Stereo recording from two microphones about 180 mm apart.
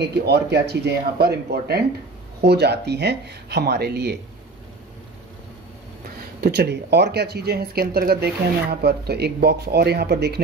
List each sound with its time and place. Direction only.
0.0 s speech: 65° right (ahead or behind)
6.4 s speech: 65° right (ahead or behind)